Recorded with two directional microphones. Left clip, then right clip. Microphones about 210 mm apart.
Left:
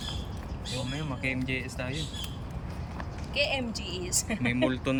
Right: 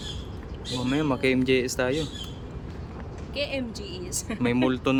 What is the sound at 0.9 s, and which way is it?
Speech, 25° right (ahead or behind).